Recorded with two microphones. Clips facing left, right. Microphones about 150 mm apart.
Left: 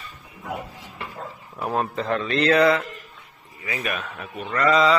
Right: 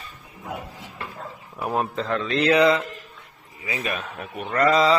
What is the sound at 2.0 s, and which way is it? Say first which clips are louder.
Speech: left 1 dB; 10° left (ahead or behind).